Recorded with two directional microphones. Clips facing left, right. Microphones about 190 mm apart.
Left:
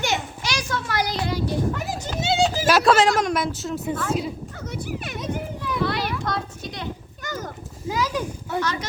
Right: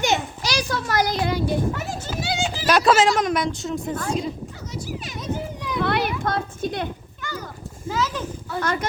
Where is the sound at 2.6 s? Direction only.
Centre (ahead or behind).